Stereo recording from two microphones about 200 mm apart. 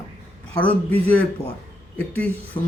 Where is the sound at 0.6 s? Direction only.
10° left (ahead or behind).